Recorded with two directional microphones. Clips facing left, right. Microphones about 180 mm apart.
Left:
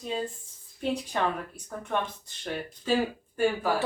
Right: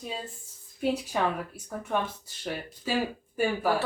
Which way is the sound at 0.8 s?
5° right (ahead or behind).